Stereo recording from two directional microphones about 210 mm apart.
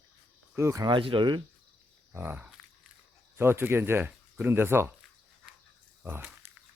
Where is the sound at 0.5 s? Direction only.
15° right (ahead or behind).